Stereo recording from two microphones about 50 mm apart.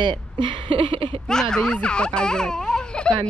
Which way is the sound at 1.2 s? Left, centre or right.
Centre.